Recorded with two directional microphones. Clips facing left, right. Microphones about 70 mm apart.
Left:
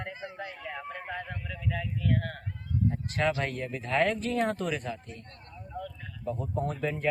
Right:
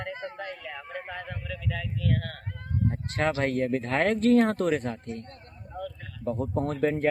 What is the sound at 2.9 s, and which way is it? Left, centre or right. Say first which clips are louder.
Speech: right 2 dB; right.